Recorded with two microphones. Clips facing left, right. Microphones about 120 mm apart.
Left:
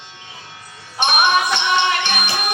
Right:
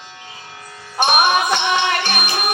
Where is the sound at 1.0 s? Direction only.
45° right (ahead or behind).